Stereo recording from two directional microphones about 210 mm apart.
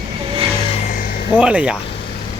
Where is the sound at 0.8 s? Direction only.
40° left (ahead or behind).